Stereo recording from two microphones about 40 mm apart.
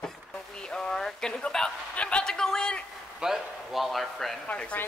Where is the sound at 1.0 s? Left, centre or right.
Centre.